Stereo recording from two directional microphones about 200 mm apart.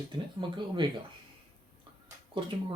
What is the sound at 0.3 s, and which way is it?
Speech, 25° right (ahead or behind).